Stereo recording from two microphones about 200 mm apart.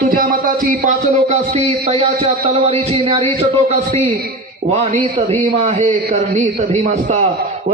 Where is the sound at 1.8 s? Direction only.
25° right (ahead or behind).